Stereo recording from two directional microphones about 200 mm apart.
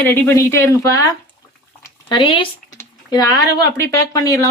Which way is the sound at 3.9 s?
15° left (ahead or behind).